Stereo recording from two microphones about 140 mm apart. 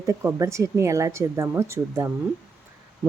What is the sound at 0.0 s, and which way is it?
Speech, 20° right (ahead or behind).